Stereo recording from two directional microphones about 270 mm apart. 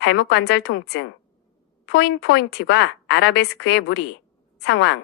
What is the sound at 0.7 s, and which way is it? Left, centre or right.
Speech, left.